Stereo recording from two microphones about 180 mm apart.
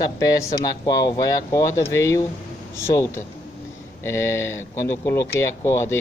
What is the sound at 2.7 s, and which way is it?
Speech, 15° left (ahead or behind).